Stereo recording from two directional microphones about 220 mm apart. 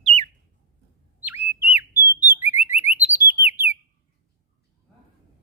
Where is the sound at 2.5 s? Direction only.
30° left (ahead or behind).